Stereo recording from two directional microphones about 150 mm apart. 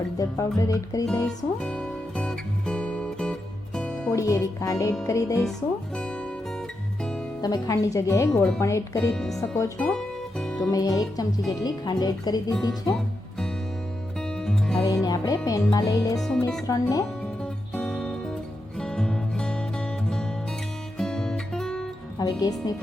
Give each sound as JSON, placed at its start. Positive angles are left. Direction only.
{"t": 0.2, "sound": "speech", "side_deg": 20}
{"t": 1.5, "sound": "music", "side_deg": 5}
{"t": 4.1, "sound": "speech", "side_deg": 20}
{"t": 7.4, "sound": "speech", "side_deg": 25}
{"t": 9.1, "sound": "speech", "side_deg": 5}
{"t": 9.7, "sound": "music", "side_deg": 5}
{"t": 10.6, "sound": "speech", "side_deg": 25}
{"t": 14.4, "sound": "music", "side_deg": 5}
{"t": 14.8, "sound": "speech", "side_deg": 25}
{"t": 16.1, "sound": "speech", "side_deg": 0}
{"t": 16.6, "sound": "speech", "side_deg": 25}
{"t": 17.7, "sound": "music", "side_deg": 5}
{"t": 21.0, "sound": "music", "side_deg": 5}
{"t": 22.2, "sound": "speech", "side_deg": 25}